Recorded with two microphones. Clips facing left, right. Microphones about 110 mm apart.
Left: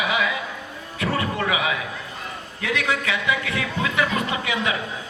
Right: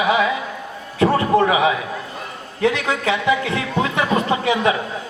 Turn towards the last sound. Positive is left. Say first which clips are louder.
# right 7 dB
turn(degrees=-30)  # may be behind; listen again after turning